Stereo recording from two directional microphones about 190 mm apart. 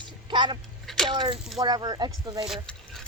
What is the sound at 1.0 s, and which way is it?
Speech, 25° right (ahead or behind).